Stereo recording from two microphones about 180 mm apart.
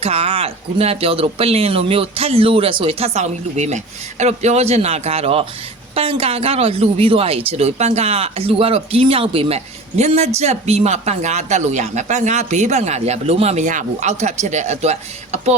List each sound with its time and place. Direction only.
0.0 s speech: 35° right (ahead or behind)